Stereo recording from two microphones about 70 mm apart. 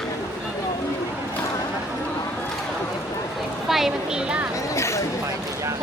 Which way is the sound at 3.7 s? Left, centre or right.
Centre.